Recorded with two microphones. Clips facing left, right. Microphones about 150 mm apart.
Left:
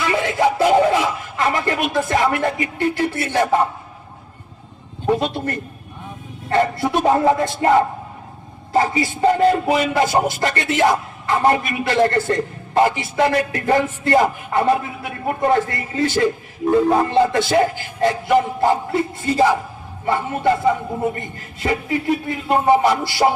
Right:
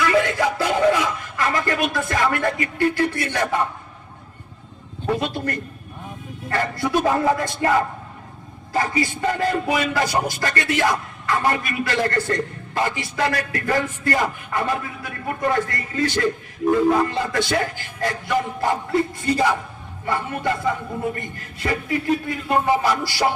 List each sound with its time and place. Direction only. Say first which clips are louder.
0.0 s a sound: left 1 dB; 25° left (ahead or behind)
3.2 s speech: left 5 dB; 25° left (ahead or behind)
5.0 s a man's voice: left 4 dB; 25° left (ahead or behind)
8.7 s speech: left 4 dB; 25° left (ahead or behind)